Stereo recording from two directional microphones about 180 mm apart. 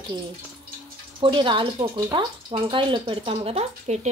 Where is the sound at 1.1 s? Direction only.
30° right (ahead or behind).